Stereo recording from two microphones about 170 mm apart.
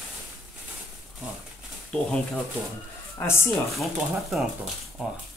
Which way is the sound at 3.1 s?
15° left (ahead or behind).